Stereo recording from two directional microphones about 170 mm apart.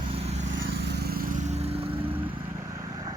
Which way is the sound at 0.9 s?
70° right (ahead or behind).